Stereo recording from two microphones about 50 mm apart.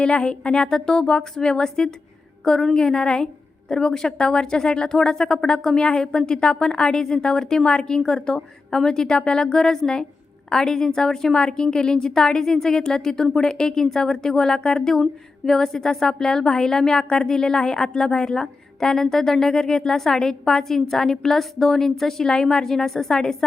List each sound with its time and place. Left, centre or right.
0.0 s a woman's voice: centre